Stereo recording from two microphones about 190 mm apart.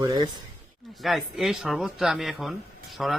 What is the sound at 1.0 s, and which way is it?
A man's voice, centre (ahead or behind).